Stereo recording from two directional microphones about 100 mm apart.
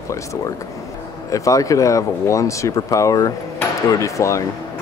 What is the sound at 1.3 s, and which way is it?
Speech, 35° left (ahead or behind).